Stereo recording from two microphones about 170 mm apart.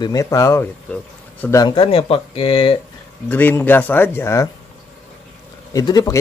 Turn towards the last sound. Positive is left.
turn(degrees=20)  # may be behind; listen again after turning